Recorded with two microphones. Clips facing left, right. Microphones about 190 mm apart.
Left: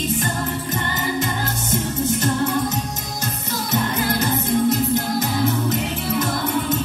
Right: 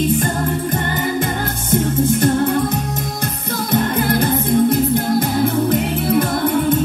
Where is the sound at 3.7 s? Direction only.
55° right (ahead or behind).